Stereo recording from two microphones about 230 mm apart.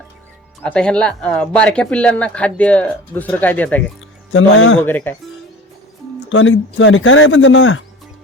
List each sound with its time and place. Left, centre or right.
0.6 s speech: centre
4.3 s speech: left
4.8 s speech: centre
6.2 s speech: left